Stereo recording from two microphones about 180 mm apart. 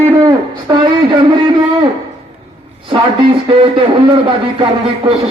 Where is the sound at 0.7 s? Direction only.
20° right (ahead or behind).